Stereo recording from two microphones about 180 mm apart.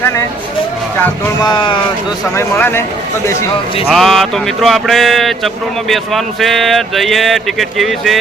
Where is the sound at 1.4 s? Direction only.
25° left (ahead or behind).